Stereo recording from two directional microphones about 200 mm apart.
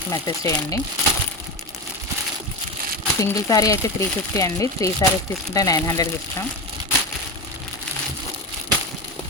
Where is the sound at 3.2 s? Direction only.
15° left (ahead or behind).